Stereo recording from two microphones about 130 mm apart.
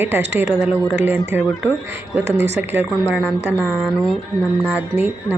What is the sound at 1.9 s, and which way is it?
Speech, 15° right (ahead or behind).